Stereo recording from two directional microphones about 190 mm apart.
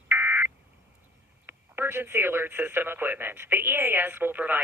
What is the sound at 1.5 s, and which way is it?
Speech, 10° right (ahead or behind).